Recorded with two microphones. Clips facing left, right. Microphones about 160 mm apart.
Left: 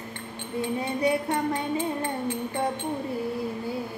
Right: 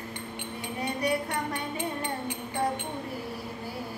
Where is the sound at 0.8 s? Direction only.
20° left (ahead or behind).